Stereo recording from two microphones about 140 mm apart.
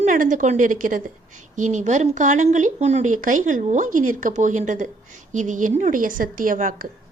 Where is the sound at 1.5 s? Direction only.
60° right (ahead or behind).